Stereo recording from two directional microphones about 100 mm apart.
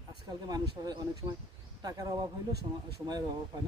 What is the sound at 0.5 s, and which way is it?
Speech, 45° right (ahead or behind).